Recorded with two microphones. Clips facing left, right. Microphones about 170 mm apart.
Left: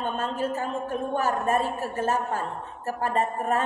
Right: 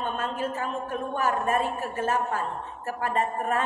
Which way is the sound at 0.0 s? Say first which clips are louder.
Left 1 dB; 35° left (ahead or behind).